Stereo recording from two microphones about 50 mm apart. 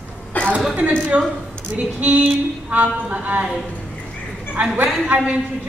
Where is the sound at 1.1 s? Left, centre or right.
Right.